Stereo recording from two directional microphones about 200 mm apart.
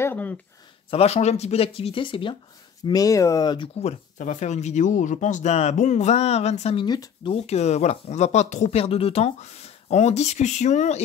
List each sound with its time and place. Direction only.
0.0 s speech: 10° left (ahead or behind)
0.8 s speech: 30° left (ahead or behind)
7.3 s speech: 35° left (ahead or behind)